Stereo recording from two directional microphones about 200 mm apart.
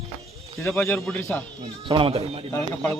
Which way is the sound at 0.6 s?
10° left (ahead or behind).